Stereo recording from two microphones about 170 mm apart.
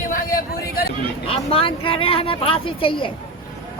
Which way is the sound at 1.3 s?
30° left (ahead or behind).